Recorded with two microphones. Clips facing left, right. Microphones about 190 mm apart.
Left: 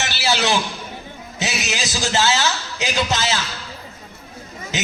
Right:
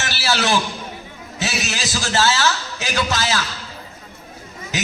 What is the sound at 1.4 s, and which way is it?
A man's voice, 20° left (ahead or behind).